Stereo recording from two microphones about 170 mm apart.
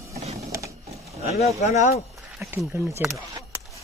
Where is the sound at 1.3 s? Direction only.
40° left (ahead or behind).